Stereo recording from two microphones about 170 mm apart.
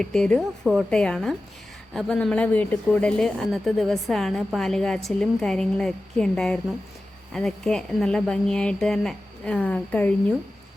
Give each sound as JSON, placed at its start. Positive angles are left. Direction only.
{"t": 0.0, "sound": "speech", "side_deg": 5}